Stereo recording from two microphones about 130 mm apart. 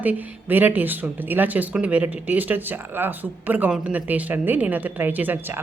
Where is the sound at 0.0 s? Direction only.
15° right (ahead or behind).